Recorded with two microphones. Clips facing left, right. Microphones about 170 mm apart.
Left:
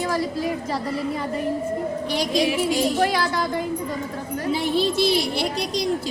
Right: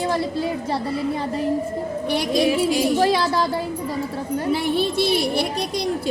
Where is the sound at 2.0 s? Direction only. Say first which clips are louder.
Right 3 dB; 55° right (ahead or behind).